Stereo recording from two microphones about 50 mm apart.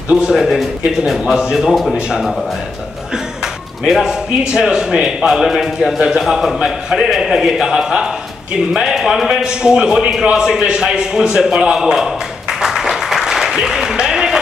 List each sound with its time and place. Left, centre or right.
0.1 s speech: centre
0.5 s a man's voice: centre
1.7 s a man's voice: centre
2.0 s speech: centre
3.9 s speech: centre
5.9 s a man's voice: centre
10.3 s a sound: centre